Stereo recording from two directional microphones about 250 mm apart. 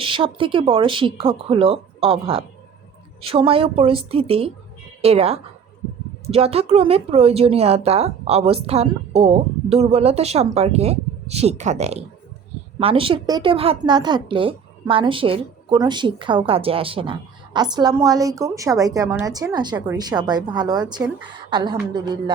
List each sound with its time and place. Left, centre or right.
0.0 s a woman's voice: right